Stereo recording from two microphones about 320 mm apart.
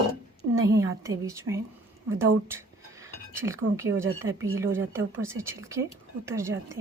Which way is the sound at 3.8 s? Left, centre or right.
Centre.